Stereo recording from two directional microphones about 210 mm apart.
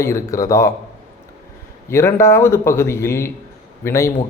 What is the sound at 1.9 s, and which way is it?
A man's voice, 10° left (ahead or behind).